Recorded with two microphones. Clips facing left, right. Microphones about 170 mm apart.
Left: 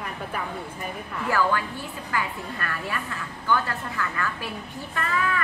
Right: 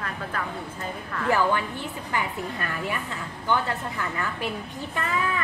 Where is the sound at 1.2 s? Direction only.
20° right (ahead or behind).